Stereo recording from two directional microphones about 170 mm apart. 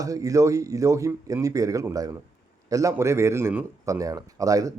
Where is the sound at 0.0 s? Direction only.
20° right (ahead or behind).